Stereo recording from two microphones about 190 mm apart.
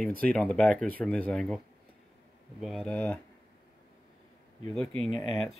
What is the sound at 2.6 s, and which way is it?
Speech, centre (ahead or behind).